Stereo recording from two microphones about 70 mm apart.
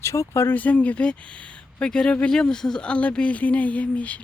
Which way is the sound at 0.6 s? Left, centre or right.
Left.